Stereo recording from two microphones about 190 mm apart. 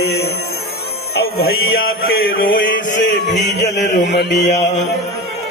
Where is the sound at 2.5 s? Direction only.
45° left (ahead or behind).